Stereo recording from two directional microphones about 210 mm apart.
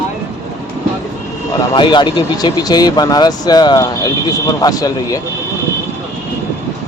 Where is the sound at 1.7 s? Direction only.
20° left (ahead or behind).